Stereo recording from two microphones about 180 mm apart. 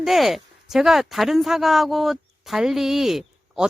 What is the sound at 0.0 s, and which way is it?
Speech, centre (ahead or behind).